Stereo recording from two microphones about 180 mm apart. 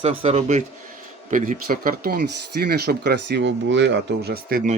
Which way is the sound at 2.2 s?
65° right (ahead or behind).